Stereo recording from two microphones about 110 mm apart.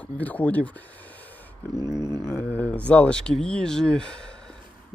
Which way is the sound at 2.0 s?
30° left (ahead or behind).